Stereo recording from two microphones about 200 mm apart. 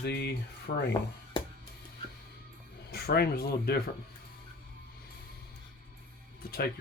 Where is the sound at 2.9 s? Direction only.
50° left (ahead or behind).